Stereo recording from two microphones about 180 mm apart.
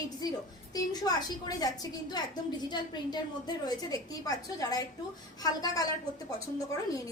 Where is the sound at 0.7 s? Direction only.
20° left (ahead or behind).